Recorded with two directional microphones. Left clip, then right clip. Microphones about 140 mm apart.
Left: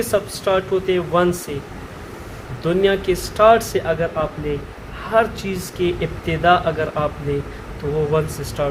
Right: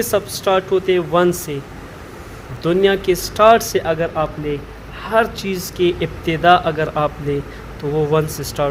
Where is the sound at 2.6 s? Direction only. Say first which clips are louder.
Right 2 dB; 60° right (ahead or behind); by 7.1 s 80° right.